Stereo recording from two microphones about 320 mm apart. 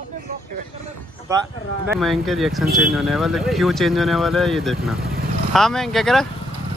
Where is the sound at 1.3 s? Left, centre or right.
Centre.